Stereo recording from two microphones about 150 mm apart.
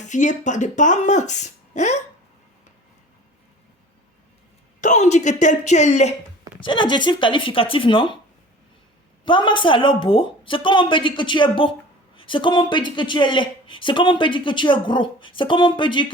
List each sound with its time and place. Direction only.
0.1 s speech: 55° left (ahead or behind)
4.8 s speech: 55° left (ahead or behind)
6.6 s speech: 35° left (ahead or behind)
9.2 s speech: 35° left (ahead or behind)